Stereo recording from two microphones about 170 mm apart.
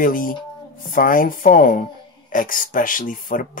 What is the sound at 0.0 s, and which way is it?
Speech, 55° left (ahead or behind).